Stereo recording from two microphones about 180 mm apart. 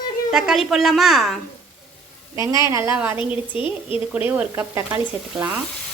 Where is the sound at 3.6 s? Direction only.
30° left (ahead or behind).